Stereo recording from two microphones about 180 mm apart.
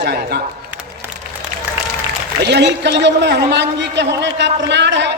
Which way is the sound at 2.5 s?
75° right (ahead or behind).